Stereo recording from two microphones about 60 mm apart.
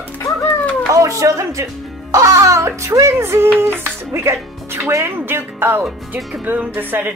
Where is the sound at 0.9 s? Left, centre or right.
Right.